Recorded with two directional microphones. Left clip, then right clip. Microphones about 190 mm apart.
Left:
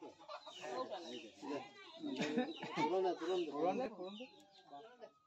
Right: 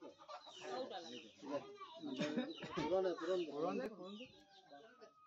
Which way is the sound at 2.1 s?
10° right (ahead or behind).